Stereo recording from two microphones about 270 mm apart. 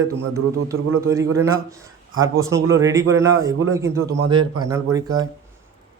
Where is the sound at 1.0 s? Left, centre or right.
Centre.